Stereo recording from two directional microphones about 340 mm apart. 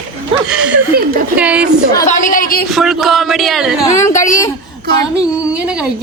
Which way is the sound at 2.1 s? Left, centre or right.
Left.